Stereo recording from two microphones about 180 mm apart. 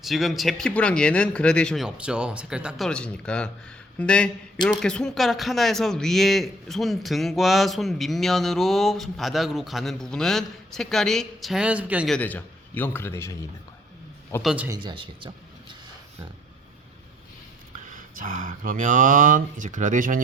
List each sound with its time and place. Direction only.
0.0 s a man's voice: centre (ahead or behind)
12.1 s a man's voice: 10° left (ahead or behind)
14.4 s speech: 5° right (ahead or behind)
14.7 s speech: 25° right (ahead or behind)
17.8 s speech: 45° right (ahead or behind)